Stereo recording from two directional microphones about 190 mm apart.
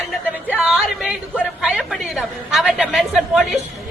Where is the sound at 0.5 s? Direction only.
5° right (ahead or behind).